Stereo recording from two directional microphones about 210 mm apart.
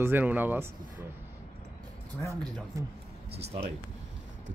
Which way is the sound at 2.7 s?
15° right (ahead or behind).